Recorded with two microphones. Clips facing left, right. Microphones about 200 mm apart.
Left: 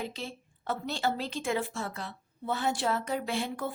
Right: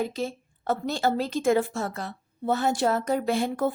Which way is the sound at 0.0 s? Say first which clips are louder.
Right 9 dB; 45° right (ahead or behind).